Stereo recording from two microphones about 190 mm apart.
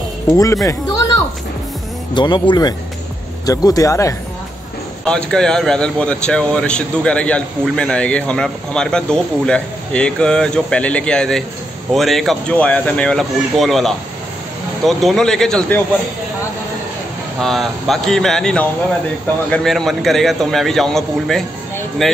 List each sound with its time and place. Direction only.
0.3 s speech: 15° left (ahead or behind)
2.1 s speech: 25° left (ahead or behind)
5.0 s speech: 5° left (ahead or behind)
17.4 s speech: centre (ahead or behind)